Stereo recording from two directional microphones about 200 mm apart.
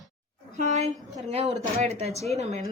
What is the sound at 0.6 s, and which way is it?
Speech, 35° right (ahead or behind).